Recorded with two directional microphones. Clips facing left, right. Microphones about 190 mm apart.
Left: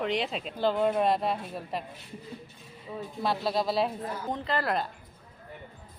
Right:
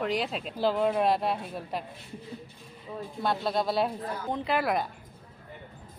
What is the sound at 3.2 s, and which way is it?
Speech, centre (ahead or behind).